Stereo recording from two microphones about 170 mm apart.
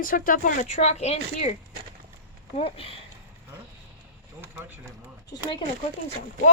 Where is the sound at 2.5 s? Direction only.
35° left (ahead or behind).